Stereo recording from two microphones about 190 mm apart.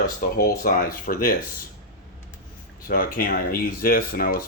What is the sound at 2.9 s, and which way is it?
Speech, 50° left (ahead or behind).